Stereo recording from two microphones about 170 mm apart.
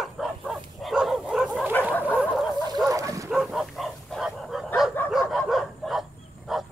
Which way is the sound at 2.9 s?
20° right (ahead or behind).